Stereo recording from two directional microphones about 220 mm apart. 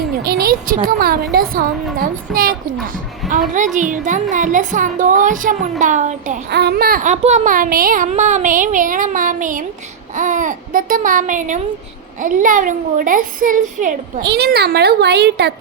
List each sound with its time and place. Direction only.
0.2 s a child's voice: 45° right (ahead or behind)
6.5 s a child's voice: 45° right (ahead or behind)
14.2 s a child's voice: 50° right (ahead or behind)